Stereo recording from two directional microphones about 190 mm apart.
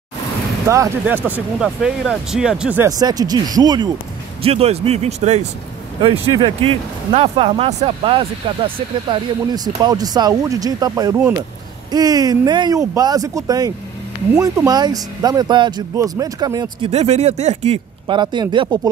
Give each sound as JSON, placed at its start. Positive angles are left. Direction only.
{"t": 0.7, "sound": "speech", "side_deg": -10}
{"t": 3.0, "sound": "speech", "side_deg": -20}
{"t": 16.9, "sound": "speech", "side_deg": -35}
{"t": 18.0, "sound": "speech", "side_deg": -25}